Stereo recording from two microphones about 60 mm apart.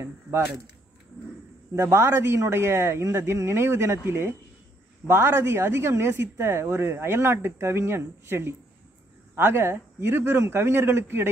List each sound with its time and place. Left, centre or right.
0.0 s speech: right
1.8 s a man's voice: right
2.0 s a man's voice: right